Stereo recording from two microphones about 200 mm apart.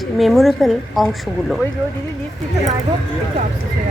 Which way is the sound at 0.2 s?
Centre (ahead or behind).